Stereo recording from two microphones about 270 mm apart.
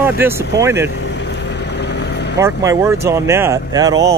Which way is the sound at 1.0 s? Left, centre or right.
Left.